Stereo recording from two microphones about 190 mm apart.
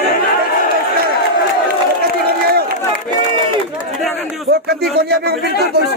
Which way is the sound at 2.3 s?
55° right (ahead or behind).